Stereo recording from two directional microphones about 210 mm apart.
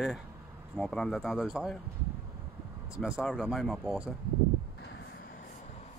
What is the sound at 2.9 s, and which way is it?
Speech, 5° right (ahead or behind).